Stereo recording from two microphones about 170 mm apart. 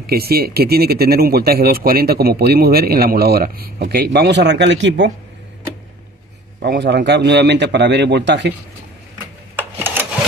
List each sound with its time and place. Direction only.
0.0 s speech: 65° right (ahead or behind); by 5.1 s 90° right
6.6 s a man's voice: 85° right
9.6 s sewing machine: 10° right (ahead or behind)